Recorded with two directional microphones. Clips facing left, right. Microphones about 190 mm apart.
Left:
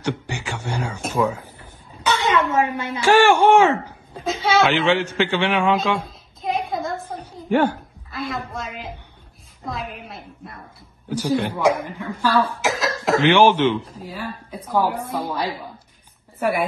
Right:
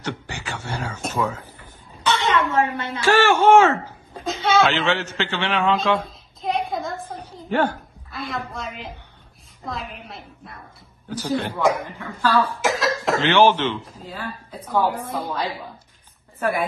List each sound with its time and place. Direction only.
0.0 s a woman's voice: 15° left (ahead or behind)
2.0 s a sound: 10° left (ahead or behind)
3.0 s a woman's voice: 15° left (ahead or behind)
4.1 s speech: centre (ahead or behind)
4.6 s a man's voice: 15° left (ahead or behind)
7.4 s a woman's voice: 10° left (ahead or behind)
8.1 s a woman's voice: centre (ahead or behind)
11.1 s a woman's voice: 10° left (ahead or behind)
12.6 s cough: centre (ahead or behind)
13.2 s a woman's voice: 10° left (ahead or behind)